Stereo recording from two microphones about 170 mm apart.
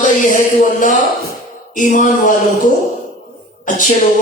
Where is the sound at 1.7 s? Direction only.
50° left (ahead or behind).